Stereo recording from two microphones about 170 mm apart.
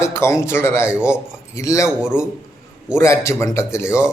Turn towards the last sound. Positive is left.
turn(degrees=15)  # may be behind; listen again after turning